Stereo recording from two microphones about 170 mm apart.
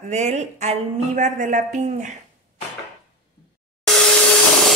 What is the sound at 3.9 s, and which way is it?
Vacuum cleaner, 5° left (ahead or behind).